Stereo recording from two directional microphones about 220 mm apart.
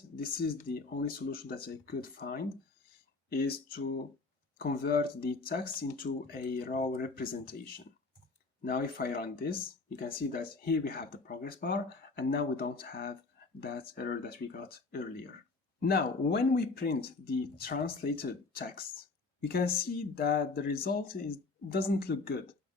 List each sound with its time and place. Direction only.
0.2 s speech: 40° left (ahead or behind)
8.6 s speech: 45° left (ahead or behind)